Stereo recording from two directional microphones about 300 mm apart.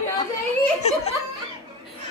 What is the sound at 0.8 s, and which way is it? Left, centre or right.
Speech, left.